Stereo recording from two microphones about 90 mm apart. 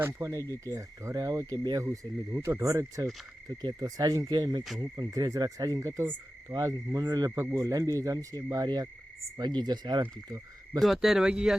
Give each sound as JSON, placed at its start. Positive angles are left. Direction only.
{"t": 0.0, "sound": "speech", "side_deg": -35}
{"t": 1.8, "sound": "speech", "side_deg": -35}
{"t": 7.3, "sound": "speech", "side_deg": -30}
{"t": 10.8, "sound": "speech", "side_deg": 0}